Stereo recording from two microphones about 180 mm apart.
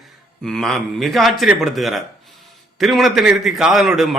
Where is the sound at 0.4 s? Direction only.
5° left (ahead or behind).